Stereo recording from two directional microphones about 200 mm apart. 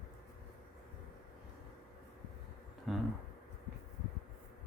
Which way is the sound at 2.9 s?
Centre (ahead or behind).